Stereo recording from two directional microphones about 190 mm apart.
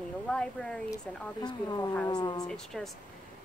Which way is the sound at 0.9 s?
20° left (ahead or behind).